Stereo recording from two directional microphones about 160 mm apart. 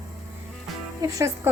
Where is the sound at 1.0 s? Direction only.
20° right (ahead or behind).